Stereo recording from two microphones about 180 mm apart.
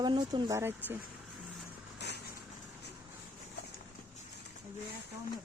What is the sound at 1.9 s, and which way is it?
Vehicle, 70° left (ahead or behind).